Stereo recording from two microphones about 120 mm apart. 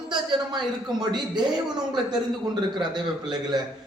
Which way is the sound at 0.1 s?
40° right (ahead or behind).